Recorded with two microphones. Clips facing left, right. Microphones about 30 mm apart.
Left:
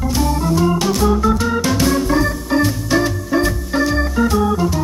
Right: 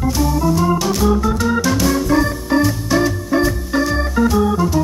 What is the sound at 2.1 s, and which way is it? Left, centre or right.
Organ, centre.